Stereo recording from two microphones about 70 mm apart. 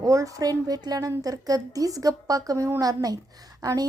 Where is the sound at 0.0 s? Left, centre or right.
Right.